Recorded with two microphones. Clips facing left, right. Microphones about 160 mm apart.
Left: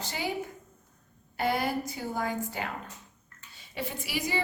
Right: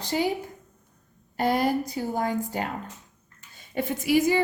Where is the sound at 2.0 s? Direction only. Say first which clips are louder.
Right 5 dB; 40° right (ahead or behind).